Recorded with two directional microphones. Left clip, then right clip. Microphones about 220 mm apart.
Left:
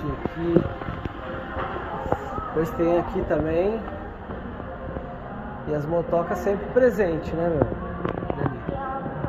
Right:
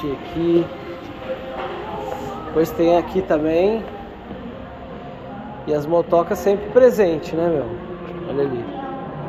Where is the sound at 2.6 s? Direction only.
25° right (ahead or behind).